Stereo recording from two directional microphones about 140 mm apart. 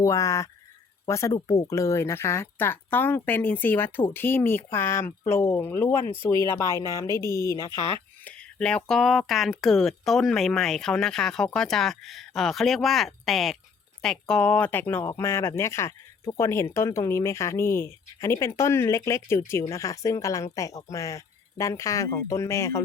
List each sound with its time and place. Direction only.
0.0 s speech: 20° left (ahead or behind)
8.3 s speech: 5° left (ahead or behind)